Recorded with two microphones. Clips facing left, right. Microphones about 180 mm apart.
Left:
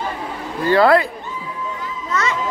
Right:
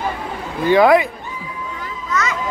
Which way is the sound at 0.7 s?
15° right (ahead or behind).